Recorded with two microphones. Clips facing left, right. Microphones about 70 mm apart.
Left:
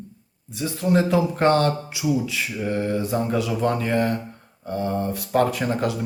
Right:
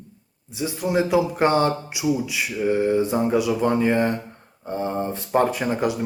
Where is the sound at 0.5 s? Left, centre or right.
Centre.